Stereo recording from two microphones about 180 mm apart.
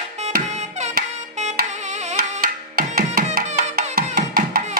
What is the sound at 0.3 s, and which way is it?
Music, 45° right (ahead or behind).